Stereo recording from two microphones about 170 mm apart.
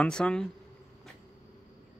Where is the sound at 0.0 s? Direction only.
5° left (ahead or behind).